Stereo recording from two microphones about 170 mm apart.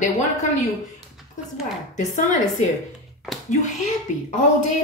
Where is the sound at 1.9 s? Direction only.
45° left (ahead or behind).